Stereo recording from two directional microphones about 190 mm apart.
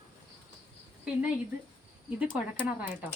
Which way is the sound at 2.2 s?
10° right (ahead or behind).